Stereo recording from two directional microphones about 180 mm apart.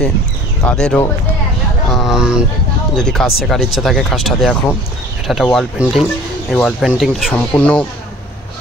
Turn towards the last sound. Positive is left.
turn(degrees=5)  # may be behind; listen again after turning